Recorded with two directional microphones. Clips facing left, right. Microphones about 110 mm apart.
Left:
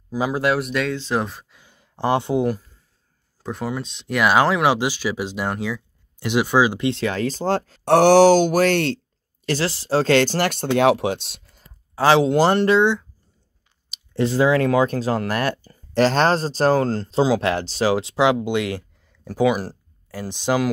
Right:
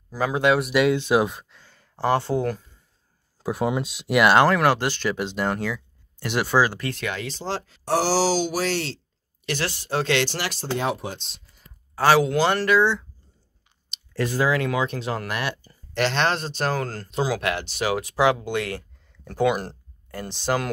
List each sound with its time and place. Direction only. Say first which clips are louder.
0.3 s speech: right 2 dB; centre (ahead or behind)
0.8 s speech: right 4 dB; 15° right (ahead or behind)
1.6 s speech: left 2 dB; 15° left (ahead or behind)
3.8 s speech: right 1 dB; 10° right (ahead or behind); by 7.8 s 45° left (ahead or behind)
7.8 s speech: left 10 dB; 60° left (ahead or behind)
9.5 s speech: left 6 dB; 30° left (ahead or behind); by 11.4 s 70° left (ahead or behind)
11.6 s a sound: left 2 dB; 25° left (ahead or behind)
12.5 s speech: left 3 dB; 25° left (ahead or behind)
14.1 s speech: left 5 dB; 25° left (ahead or behind)
14.6 s speech: left 7 dB; 40° left (ahead or behind); by 20.2 s 5° left (ahead or behind)
20.2 s speech: left 4 dB; 15° left (ahead or behind)